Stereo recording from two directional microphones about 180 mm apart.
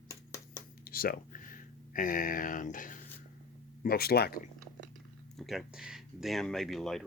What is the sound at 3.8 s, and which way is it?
Speech, 60° left (ahead or behind).